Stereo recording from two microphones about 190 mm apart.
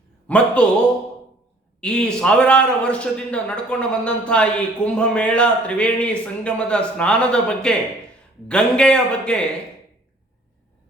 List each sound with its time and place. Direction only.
0.3 s speech: 5° left (ahead or behind)
1.8 s a man's voice: 5° left (ahead or behind)